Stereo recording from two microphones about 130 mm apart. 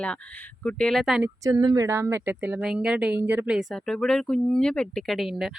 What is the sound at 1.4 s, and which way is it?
Speech, 30° right (ahead or behind).